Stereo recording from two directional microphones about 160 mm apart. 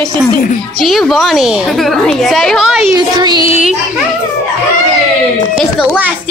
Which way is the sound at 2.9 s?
25° right (ahead or behind).